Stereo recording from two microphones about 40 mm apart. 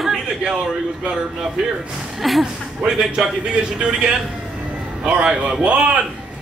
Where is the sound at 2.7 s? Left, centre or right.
Centre.